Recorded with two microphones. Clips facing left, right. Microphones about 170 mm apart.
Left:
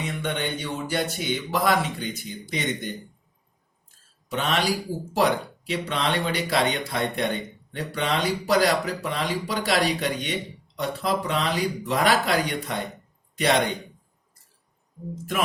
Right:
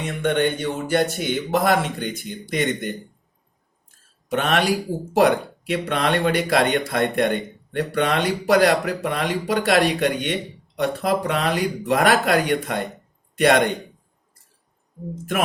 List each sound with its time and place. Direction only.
0.0 s speech: 50° right (ahead or behind)
4.3 s speech: 55° right (ahead or behind)